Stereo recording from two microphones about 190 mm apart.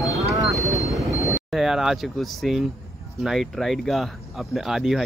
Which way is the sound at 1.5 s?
Centre (ahead or behind).